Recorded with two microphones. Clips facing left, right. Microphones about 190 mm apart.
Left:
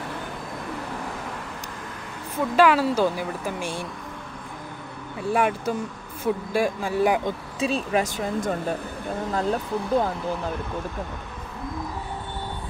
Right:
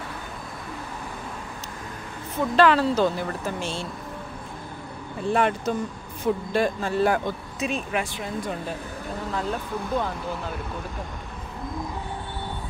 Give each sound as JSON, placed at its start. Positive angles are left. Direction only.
{"t": 2.5, "sound": "speech", "side_deg": 10}
{"t": 5.3, "sound": "speech", "side_deg": 10}
{"t": 7.5, "sound": "speech", "side_deg": 35}